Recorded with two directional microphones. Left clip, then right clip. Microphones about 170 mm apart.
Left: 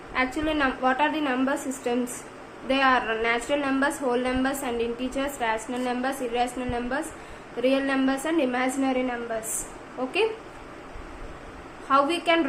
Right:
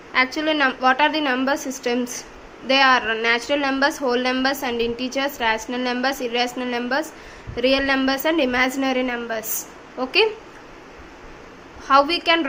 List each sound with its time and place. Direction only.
0.3 s a woman's voice: 25° right (ahead or behind)
11.9 s a woman's voice: 30° right (ahead or behind)